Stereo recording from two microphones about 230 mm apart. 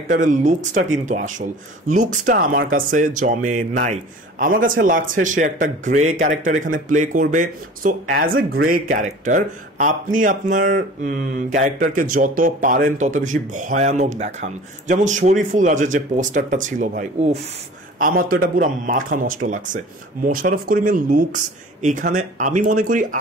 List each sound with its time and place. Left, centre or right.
0.1 s speech: right